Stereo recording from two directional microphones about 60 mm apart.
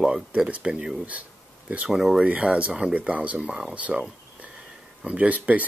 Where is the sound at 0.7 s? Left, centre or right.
Centre.